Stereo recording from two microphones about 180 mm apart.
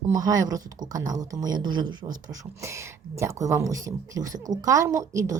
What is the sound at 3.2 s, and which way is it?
A woman's voice, 15° right (ahead or behind).